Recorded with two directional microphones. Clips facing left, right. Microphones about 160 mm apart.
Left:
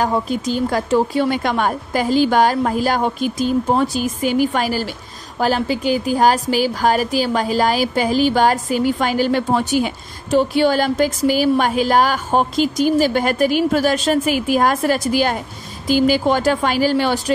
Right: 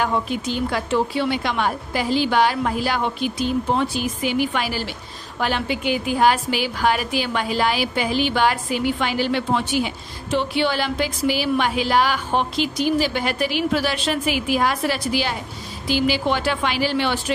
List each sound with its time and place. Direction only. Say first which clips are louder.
0.0 s a woman's voice: left 3 dB; 40° left (ahead or behind)